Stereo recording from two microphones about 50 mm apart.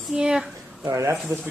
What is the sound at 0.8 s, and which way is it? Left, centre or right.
Speech, right.